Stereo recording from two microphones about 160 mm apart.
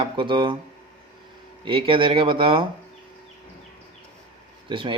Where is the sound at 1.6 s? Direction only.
35° right (ahead or behind).